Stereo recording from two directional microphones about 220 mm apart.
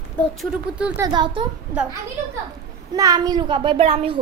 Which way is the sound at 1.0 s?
20° right (ahead or behind).